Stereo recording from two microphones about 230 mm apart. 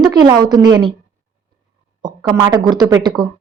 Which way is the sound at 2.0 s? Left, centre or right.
Centre.